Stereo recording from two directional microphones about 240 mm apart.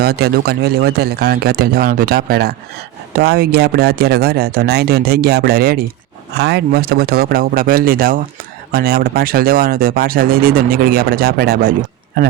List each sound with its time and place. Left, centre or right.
0.0 s speech: right